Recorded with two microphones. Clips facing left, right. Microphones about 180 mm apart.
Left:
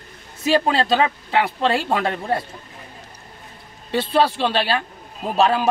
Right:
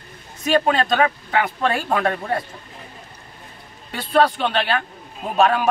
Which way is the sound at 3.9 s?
30° left (ahead or behind).